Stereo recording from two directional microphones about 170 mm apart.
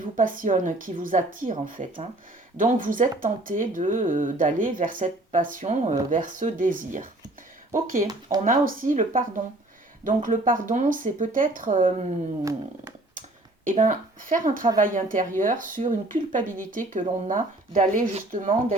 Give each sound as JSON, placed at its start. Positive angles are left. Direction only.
{"t": 0.2, "sound": "speech", "side_deg": -50}
{"t": 12.4, "sound": "speech", "side_deg": -20}
{"t": 13.7, "sound": "speech", "side_deg": -50}